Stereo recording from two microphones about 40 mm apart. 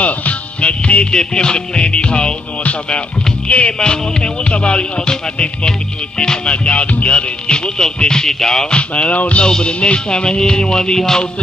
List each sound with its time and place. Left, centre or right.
0.0 s music: left
1.1 s music: left
2.6 s music: left
3.7 s music: centre
8.7 s music: left